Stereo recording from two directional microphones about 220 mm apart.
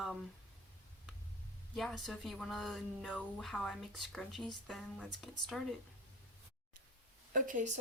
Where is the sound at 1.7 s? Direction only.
Centre (ahead or behind).